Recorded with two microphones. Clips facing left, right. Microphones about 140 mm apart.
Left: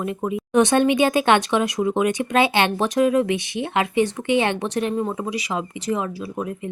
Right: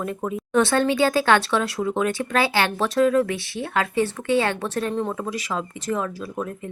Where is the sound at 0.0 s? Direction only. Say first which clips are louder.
Left 2 dB; 10° left (ahead or behind).